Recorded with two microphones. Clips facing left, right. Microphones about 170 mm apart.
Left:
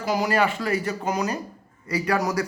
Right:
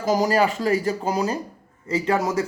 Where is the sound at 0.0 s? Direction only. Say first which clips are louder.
Right 3 dB; 40° right (ahead or behind).